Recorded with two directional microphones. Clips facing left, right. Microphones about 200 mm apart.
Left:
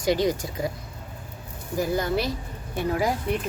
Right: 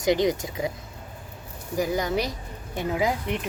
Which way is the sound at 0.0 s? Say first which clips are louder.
Right 1 dB; 20° right (ahead or behind).